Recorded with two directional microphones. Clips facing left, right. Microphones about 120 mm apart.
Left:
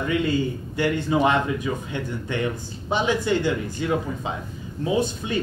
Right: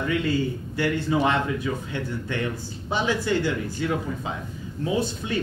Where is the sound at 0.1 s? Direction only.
20° left (ahead or behind).